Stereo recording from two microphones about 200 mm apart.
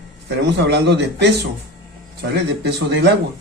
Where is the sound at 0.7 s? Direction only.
55° right (ahead or behind).